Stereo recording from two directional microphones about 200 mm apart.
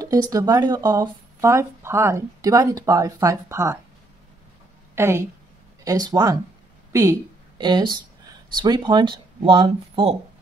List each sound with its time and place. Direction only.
0.0 s speech: 15° right (ahead or behind)
4.9 s a woman's voice: 10° right (ahead or behind)